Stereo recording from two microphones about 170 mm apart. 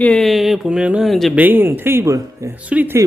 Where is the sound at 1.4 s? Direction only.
10° right (ahead or behind).